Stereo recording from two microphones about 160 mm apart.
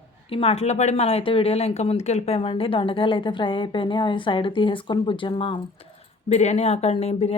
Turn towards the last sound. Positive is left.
turn(degrees=40)  # may be behind; listen again after turning